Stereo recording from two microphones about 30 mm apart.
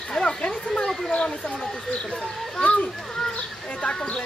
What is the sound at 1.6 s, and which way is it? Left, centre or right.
Speech, left.